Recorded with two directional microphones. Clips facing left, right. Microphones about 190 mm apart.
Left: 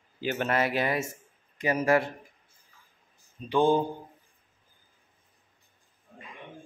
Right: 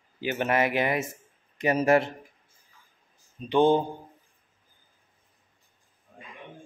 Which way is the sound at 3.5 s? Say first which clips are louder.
Right 2 dB; 20° right (ahead or behind).